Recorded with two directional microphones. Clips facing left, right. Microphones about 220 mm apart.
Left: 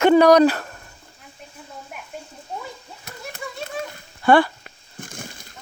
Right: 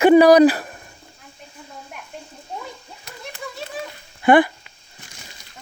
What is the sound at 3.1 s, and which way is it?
Children playing, centre (ahead or behind).